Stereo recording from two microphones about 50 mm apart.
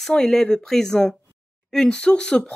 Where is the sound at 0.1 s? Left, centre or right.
Centre.